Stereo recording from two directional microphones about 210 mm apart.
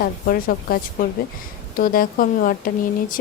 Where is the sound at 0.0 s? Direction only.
45° left (ahead or behind).